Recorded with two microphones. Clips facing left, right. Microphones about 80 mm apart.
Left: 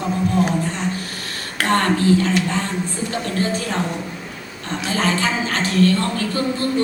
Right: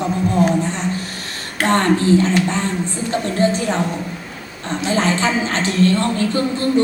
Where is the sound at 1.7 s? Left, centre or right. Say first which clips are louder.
Right 2 dB; right.